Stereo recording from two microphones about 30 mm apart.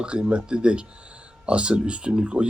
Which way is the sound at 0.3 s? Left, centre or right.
Right.